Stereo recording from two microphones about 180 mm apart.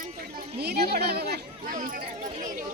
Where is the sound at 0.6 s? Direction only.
65° right (ahead or behind).